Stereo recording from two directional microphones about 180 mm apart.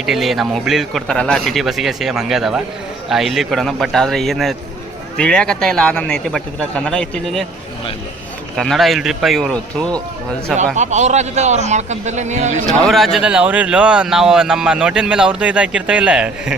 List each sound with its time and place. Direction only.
0.0 s speech: centre (ahead or behind)
8.5 s speech: centre (ahead or behind)
10.8 s a man's voice: 40° right (ahead or behind)
12.8 s speech: centre (ahead or behind)